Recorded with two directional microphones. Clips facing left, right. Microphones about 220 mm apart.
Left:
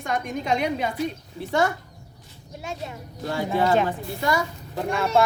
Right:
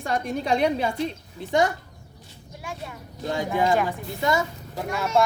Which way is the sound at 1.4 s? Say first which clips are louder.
Right 1 dB; 15° right (ahead or behind).